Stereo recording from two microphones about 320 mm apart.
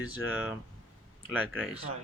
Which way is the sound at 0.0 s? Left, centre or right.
Centre.